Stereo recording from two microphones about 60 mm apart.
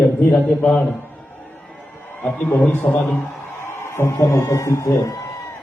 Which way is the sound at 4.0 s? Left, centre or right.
Left.